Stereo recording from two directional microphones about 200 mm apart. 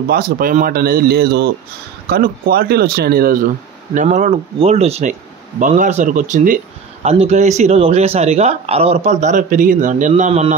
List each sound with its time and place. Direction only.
0.1 s speech: 45° right (ahead or behind)
3.9 s speech: 40° right (ahead or behind)